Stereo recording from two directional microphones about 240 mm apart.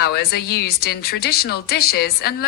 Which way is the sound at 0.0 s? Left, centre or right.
Left.